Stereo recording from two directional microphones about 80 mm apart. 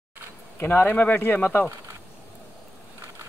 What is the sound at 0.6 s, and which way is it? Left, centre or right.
Speech, left.